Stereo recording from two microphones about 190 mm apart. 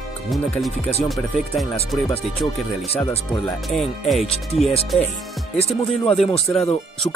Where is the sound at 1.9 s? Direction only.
Centre (ahead or behind).